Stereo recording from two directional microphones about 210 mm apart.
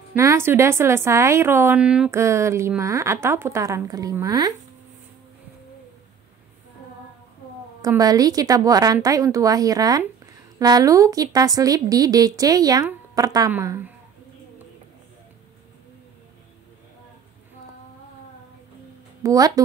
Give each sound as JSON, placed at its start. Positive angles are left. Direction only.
{"t": 0.1, "sound": "speech", "side_deg": -15}
{"t": 7.8, "sound": "speech", "side_deg": -15}
{"t": 19.2, "sound": "speech", "side_deg": -15}